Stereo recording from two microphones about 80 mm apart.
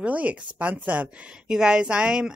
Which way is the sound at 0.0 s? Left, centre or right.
Centre.